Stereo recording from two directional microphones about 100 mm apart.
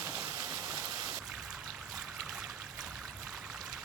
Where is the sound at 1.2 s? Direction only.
5° right (ahead or behind).